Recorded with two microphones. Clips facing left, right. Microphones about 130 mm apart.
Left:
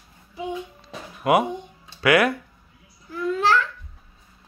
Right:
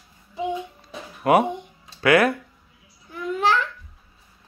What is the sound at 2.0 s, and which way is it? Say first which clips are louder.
Speech: right 1 dB; 30° right (ahead or behind).